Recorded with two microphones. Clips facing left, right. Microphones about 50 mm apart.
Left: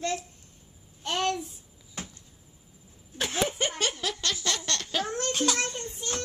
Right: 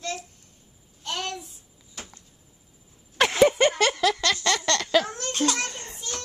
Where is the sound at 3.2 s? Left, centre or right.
Right.